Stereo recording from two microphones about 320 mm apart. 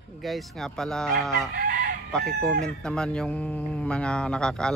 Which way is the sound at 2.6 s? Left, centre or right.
Centre.